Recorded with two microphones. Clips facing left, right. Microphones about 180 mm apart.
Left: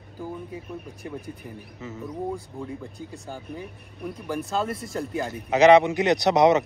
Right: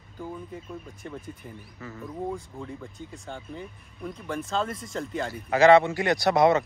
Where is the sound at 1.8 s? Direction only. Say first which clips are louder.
Left 2 dB; 20° left (ahead or behind).